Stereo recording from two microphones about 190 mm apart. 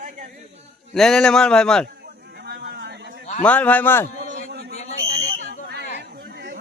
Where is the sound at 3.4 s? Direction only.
5° left (ahead or behind).